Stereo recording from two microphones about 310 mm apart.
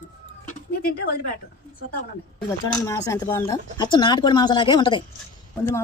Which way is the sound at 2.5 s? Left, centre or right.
Centre.